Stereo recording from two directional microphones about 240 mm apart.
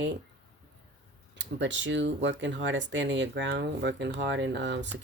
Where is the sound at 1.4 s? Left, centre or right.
Right.